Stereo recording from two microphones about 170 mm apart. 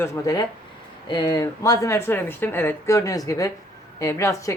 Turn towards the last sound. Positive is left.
turn(degrees=20)  # may be behind; listen again after turning